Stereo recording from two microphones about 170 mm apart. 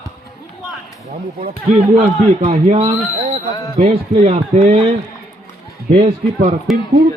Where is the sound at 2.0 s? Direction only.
45° right (ahead or behind).